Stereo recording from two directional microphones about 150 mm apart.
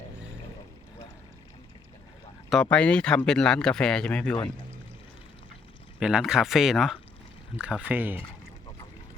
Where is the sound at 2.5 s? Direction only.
5° left (ahead or behind).